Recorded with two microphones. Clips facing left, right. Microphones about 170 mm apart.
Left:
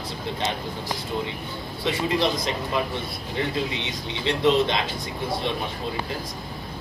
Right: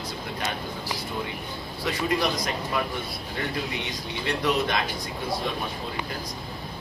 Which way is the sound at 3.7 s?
25° left (ahead or behind).